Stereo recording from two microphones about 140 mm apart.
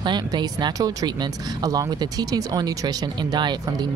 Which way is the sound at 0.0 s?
30° right (ahead or behind).